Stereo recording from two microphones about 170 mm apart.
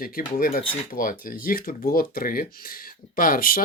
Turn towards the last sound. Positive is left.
turn(degrees=55)  # may be behind; listen again after turning